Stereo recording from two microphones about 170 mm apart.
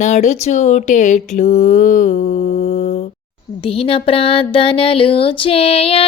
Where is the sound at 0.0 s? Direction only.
45° left (ahead or behind).